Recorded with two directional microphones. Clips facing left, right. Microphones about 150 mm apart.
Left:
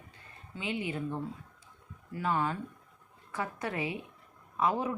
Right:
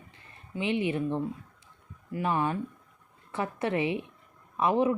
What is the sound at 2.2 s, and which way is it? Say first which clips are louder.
Speech: right 3 dB; 20° right (ahead or behind).